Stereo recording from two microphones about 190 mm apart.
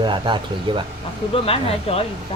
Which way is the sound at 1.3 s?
30° left (ahead or behind).